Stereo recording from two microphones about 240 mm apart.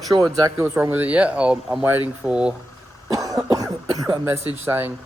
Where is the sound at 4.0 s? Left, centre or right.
Centre.